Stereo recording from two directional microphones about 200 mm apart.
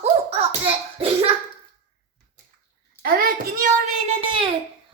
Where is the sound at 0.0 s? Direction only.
30° right (ahead or behind).